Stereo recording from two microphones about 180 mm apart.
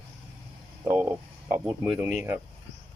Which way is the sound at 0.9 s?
10° right (ahead or behind).